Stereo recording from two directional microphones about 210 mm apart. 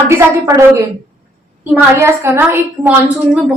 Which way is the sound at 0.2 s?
10° right (ahead or behind).